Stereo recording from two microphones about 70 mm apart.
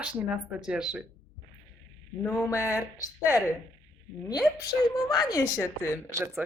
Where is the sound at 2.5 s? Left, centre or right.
Left.